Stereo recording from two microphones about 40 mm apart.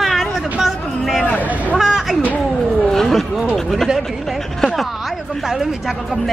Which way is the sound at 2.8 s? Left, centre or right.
Centre.